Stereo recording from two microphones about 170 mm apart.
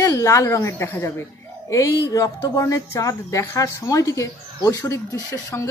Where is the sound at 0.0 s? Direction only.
15° left (ahead or behind).